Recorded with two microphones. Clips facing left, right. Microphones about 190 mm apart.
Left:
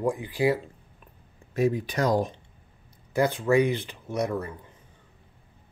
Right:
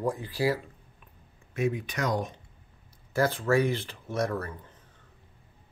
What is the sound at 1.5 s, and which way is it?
Speech, 35° left (ahead or behind).